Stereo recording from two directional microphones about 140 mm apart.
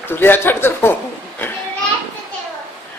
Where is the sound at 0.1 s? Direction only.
15° left (ahead or behind).